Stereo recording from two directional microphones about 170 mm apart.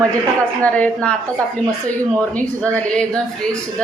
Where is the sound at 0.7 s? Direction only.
10° left (ahead or behind).